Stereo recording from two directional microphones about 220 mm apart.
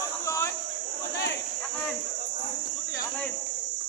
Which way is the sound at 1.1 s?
50° left (ahead or behind).